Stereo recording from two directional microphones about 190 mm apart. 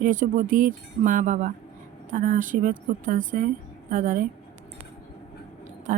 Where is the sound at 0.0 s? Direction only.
45° right (ahead or behind).